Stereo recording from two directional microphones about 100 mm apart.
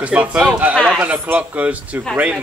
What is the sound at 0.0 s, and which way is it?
A man's voice, 10° right (ahead or behind).